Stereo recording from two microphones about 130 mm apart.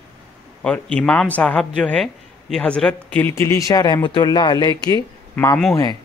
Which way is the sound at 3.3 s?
20° left (ahead or behind).